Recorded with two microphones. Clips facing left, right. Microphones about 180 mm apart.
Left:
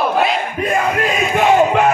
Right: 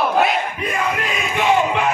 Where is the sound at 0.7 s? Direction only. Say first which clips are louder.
Left 6 dB; 50° left (ahead or behind).